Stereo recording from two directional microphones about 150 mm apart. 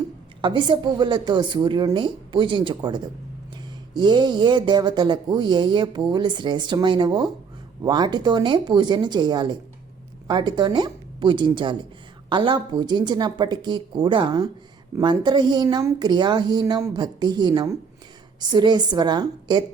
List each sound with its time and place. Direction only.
0.4 s a woman's voice: 30° right (ahead or behind)